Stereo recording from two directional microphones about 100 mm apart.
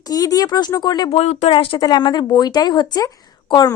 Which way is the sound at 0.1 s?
40° left (ahead or behind).